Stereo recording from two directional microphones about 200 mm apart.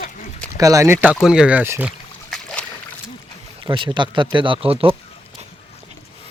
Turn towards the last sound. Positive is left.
turn(degrees=-30)  # may be behind; listen again after turning